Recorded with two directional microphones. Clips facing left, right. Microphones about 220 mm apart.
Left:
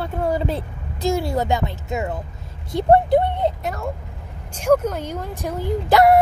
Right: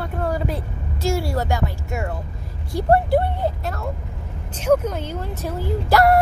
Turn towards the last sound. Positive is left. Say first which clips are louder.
# left 2 dB
turn(degrees=20)  # may be behind; listen again after turning